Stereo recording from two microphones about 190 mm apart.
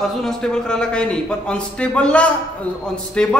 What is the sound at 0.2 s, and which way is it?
A man's voice, 5° left (ahead or behind).